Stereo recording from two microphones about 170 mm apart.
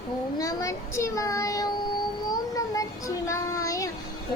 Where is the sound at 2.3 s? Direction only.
20° left (ahead or behind).